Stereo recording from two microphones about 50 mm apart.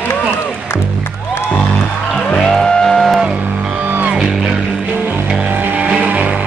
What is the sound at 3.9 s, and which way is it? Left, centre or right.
Music, right.